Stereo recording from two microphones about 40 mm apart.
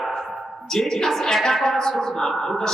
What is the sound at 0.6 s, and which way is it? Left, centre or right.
A woman's voice, centre.